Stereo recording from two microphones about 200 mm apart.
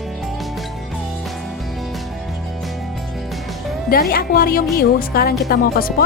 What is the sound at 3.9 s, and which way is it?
Speech, 50° left (ahead or behind).